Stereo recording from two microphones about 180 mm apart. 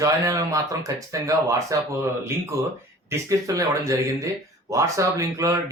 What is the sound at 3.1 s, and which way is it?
Speech, 15° right (ahead or behind).